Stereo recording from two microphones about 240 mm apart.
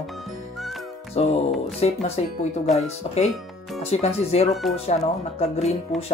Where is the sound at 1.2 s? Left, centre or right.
Left.